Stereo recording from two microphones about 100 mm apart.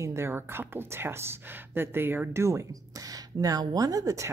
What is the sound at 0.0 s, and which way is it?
Speech, 25° right (ahead or behind).